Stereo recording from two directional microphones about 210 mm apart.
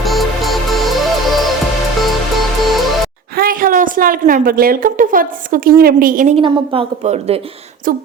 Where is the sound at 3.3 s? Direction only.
45° right (ahead or behind).